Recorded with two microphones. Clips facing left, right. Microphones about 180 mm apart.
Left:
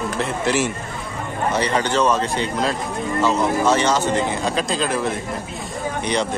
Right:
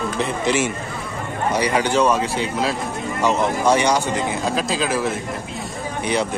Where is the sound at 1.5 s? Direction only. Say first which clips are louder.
Right 1 dB; 10° right (ahead or behind).